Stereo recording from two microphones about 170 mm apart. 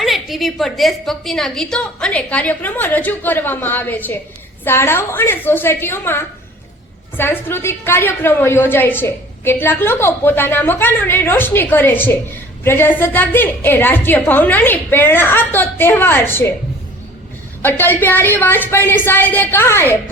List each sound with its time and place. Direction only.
0.0 s a woman's voice: centre (ahead or behind)
17.6 s a woman's voice: 10° left (ahead or behind)